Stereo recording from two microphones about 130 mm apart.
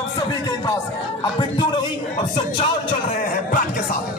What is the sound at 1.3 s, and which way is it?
Speech, 40° left (ahead or behind).